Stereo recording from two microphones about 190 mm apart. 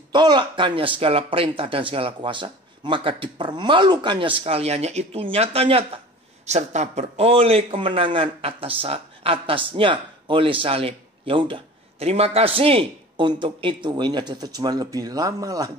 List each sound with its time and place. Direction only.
0.1 s speech: 25° right (ahead or behind)